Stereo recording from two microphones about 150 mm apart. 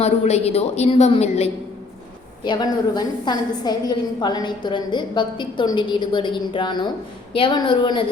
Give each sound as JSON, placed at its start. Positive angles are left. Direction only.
{"t": 0.0, "sound": "a woman's voice", "side_deg": 45}
{"t": 2.4, "sound": "a woman's voice", "side_deg": 30}